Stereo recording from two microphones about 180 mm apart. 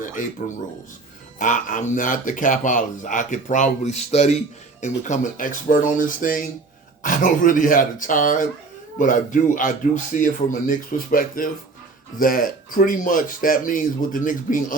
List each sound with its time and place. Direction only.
0.0 s speech: 45° left (ahead or behind)